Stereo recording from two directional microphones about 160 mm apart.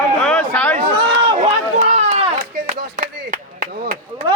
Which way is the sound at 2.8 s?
55° right (ahead or behind).